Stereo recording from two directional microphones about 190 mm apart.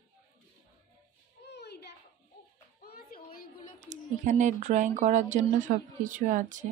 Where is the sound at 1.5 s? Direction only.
60° left (ahead or behind).